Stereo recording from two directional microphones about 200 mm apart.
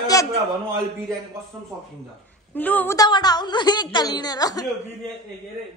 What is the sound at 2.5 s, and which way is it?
A woman's voice, 10° left (ahead or behind).